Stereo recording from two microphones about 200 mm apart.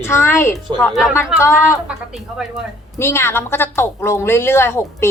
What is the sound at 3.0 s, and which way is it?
A woman's voice, 15° left (ahead or behind).